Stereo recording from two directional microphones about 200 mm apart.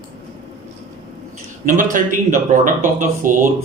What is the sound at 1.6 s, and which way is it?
Speech, 40° right (ahead or behind).